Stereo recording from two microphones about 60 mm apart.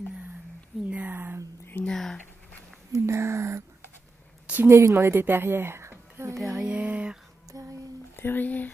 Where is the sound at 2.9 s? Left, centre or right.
Right.